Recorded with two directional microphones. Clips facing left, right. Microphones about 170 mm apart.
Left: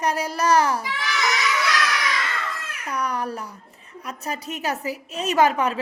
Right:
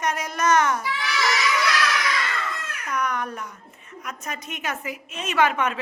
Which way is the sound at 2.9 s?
35° left (ahead or behind).